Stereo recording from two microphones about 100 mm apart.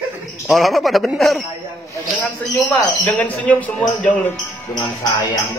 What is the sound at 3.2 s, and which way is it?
A man's voice, 15° left (ahead or behind).